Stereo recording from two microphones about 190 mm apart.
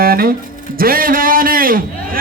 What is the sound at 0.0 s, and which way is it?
Speech, 50° right (ahead or behind).